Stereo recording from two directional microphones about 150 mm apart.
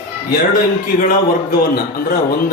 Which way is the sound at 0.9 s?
70° left (ahead or behind).